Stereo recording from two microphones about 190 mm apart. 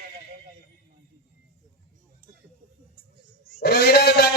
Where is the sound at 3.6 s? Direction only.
55° left (ahead or behind).